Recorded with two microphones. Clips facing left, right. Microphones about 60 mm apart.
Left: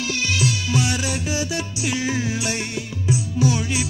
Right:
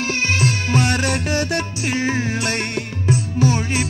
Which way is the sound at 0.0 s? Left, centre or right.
Right.